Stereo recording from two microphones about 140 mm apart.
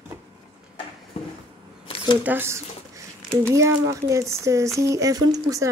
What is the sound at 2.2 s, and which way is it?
Speech, 15° right (ahead or behind).